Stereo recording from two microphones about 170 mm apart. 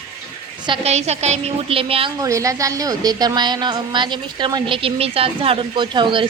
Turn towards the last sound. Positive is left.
turn(degrees=-30)  # may be behind; listen again after turning